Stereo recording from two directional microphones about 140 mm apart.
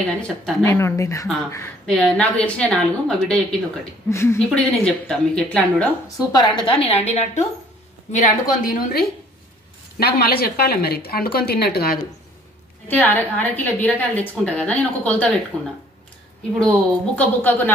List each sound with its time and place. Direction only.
0.0 s a woman's voice: 5° left (ahead or behind)
0.7 s speech: 20° left (ahead or behind)
1.9 s a woman's voice: 5° left (ahead or behind)
4.1 s speech: 20° left (ahead or behind)
4.4 s a woman's voice: 5° left (ahead or behind)
6.0 s a woman's voice: 30° left (ahead or behind); by 7.4 s 50° left (ahead or behind)
8.1 s a woman's voice: 65° left (ahead or behind); by 12.0 s 90° left
12.8 s a woman's voice: 10° left (ahead or behind)
16.5 s a woman's voice: 5° left (ahead or behind)